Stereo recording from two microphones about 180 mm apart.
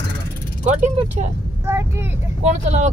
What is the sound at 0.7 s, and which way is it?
Speech, 40° right (ahead or behind).